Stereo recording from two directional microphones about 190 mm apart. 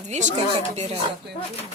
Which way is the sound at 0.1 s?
40° right (ahead or behind).